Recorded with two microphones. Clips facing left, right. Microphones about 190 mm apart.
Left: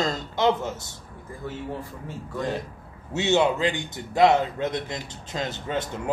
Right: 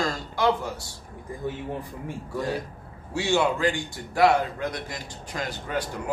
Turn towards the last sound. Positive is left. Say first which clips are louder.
# left 1 dB
turn(degrees=25)  # may be behind; listen again after turning